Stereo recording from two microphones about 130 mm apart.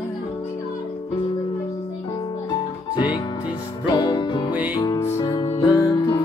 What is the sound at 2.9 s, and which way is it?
Music, 35° left (ahead or behind).